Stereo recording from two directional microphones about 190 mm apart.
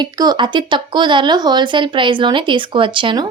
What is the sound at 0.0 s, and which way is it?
A woman's voice, 20° right (ahead or behind).